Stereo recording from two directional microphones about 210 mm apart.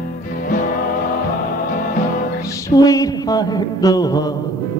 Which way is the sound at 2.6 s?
15° left (ahead or behind).